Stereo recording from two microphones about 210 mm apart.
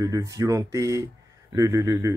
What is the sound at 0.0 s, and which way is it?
Speech, 15° right (ahead or behind).